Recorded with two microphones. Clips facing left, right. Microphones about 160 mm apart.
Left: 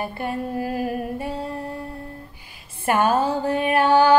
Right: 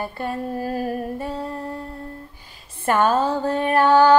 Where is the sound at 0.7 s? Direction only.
35° right (ahead or behind).